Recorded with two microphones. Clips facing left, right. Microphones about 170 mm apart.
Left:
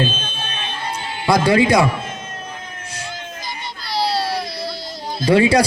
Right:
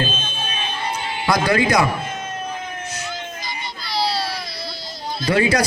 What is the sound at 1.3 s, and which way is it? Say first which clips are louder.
Speech: left 4 dB; 30° left (ahead or behind).